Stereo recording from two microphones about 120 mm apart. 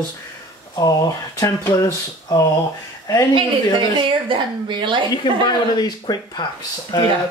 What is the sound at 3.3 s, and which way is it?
A woman's voice, 45° right (ahead or behind).